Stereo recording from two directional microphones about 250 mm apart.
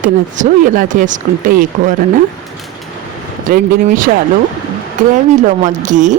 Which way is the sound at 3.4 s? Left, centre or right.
Right.